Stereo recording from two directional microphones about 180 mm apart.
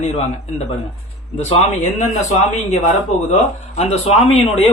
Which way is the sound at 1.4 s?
35° left (ahead or behind).